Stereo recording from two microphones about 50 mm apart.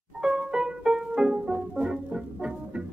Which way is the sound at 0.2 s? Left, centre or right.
Centre.